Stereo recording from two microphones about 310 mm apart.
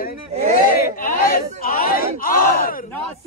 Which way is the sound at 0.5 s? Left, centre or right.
Left.